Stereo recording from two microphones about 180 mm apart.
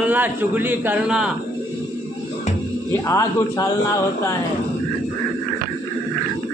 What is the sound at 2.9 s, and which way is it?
Speech, 15° left (ahead or behind).